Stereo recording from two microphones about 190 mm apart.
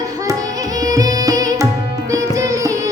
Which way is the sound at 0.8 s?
20° right (ahead or behind).